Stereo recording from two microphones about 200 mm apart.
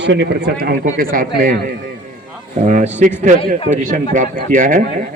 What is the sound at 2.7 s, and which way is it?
Speech, 35° right (ahead or behind).